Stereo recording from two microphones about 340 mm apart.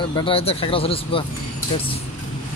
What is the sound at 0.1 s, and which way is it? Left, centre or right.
Speech, centre.